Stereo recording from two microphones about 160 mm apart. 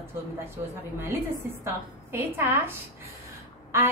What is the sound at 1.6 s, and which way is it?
A woman's voice, 15° right (ahead or behind).